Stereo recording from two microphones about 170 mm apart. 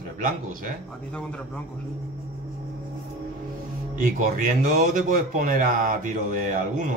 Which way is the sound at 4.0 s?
50° right (ahead or behind).